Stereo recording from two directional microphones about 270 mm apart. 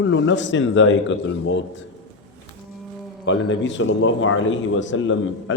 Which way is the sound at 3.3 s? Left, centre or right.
Left.